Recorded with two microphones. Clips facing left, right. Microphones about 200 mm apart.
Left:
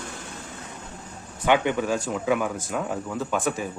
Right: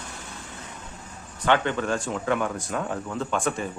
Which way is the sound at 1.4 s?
10° left (ahead or behind).